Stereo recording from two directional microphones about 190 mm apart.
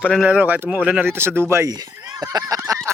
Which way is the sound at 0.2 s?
10° right (ahead or behind).